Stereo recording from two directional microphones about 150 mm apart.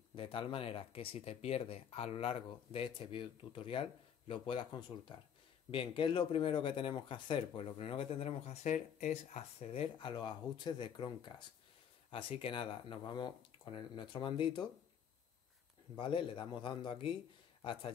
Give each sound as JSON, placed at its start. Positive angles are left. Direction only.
{"t": 0.1, "sound": "speech", "side_deg": 35}
{"t": 16.0, "sound": "a man's voice", "side_deg": 35}